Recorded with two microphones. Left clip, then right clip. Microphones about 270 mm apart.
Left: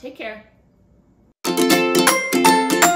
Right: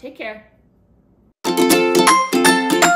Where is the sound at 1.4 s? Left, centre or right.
Right.